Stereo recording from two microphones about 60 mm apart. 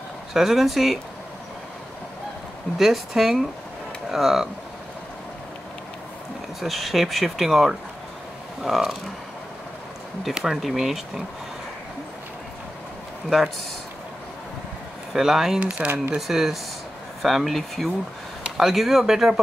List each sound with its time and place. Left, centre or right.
0.3 s speech: centre
2.8 s speech: centre
6.6 s speech: centre
10.3 s speech: centre
15.1 s speech: centre
15.6 s speech: right
16.2 s speech: centre